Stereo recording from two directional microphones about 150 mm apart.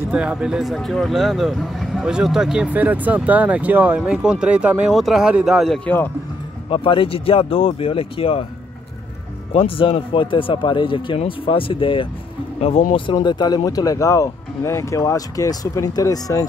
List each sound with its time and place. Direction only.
0.1 s speech: 5° right (ahead or behind)
5.9 s speech: 10° left (ahead or behind)
6.7 s speech: 35° left (ahead or behind)
9.5 s speech: 40° left (ahead or behind); by 16.4 s 25° left (ahead or behind)